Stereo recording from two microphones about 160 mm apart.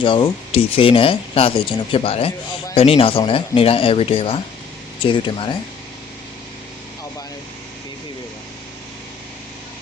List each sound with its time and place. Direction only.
0.0 s speech: 30° left (ahead or behind)